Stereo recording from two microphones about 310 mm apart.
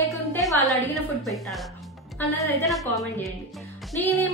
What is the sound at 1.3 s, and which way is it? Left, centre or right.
A woman's voice, centre.